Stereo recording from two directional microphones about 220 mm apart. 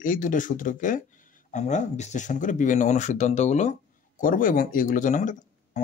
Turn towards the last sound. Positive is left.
turn(degrees=35)  # may be behind; listen again after turning